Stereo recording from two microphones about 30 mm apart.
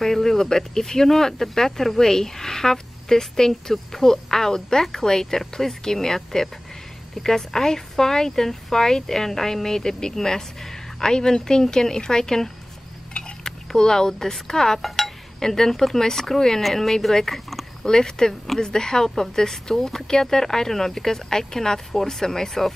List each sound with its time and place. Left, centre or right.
0.0 s speech: centre
13.4 s a sound: centre
14.5 s speech: centre
14.8 s speech: centre
15.4 s speech: centre
17.8 s a woman's voice: left